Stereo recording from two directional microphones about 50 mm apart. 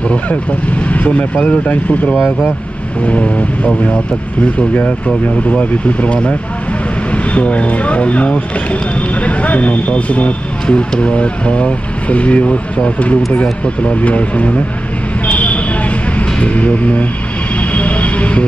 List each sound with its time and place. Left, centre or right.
0.8 s speech: left
15.2 s a sound: left
16.2 s speech: left
17.6 s vehicle: left